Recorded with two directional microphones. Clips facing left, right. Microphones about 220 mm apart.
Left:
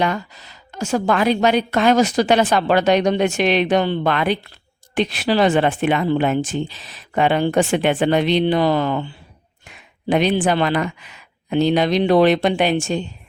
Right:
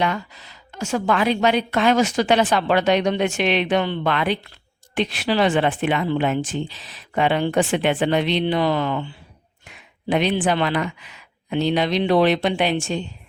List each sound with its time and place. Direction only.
0.0 s a woman's voice: 40° left (ahead or behind)